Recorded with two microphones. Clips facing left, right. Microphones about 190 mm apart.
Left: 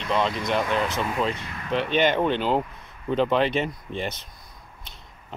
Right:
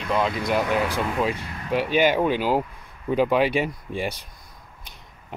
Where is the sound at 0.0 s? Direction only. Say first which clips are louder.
Right 1 dB; 5° right (ahead or behind).